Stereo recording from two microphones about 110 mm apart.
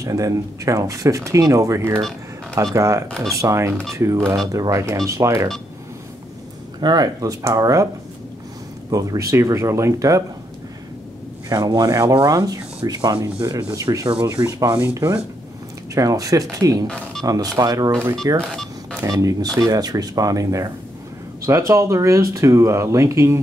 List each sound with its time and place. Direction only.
0.0 s speech: 30° right (ahead or behind)
6.8 s speech: 40° right (ahead or behind)
8.9 s speech: 30° right (ahead or behind)
11.4 s speech: 35° right (ahead or behind)
14.2 s speech: 30° right (ahead or behind)
15.9 s speech: 30° right (ahead or behind)
16.8 s speech: 5° left (ahead or behind)
17.2 s speech: 35° right (ahead or behind)
18.4 s a sound: 5° left (ahead or behind)
19.0 s speech: 35° right (ahead or behind)